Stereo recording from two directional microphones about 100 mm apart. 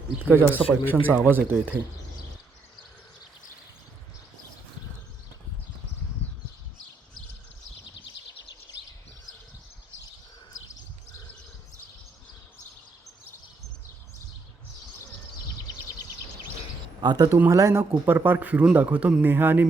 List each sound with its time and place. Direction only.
0.2 s a man's voice: 15° right (ahead or behind)
17.0 s a sound: 50° right (ahead or behind)
17.3 s a man's voice: 25° right (ahead or behind)